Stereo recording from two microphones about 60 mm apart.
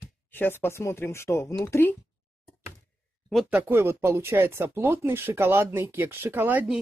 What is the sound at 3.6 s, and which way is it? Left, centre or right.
Speech, right.